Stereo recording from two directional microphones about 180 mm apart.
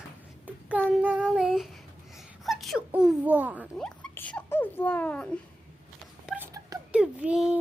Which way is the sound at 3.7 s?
5° left (ahead or behind).